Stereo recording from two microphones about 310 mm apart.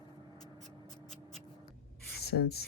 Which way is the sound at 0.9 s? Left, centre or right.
Centre.